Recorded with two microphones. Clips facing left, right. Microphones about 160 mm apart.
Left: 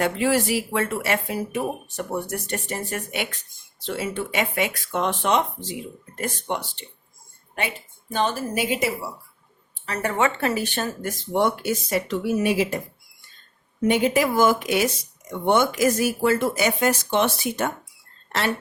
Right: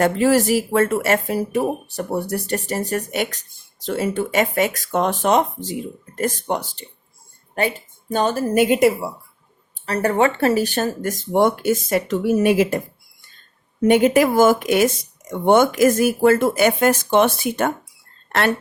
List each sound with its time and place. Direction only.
0.0 s speech: 40° right (ahead or behind)
8.1 s speech: 40° right (ahead or behind)
9.8 s speech: 40° right (ahead or behind)
13.8 s speech: 50° right (ahead or behind)